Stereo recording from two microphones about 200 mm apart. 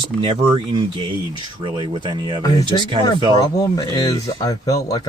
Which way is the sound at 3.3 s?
15° left (ahead or behind).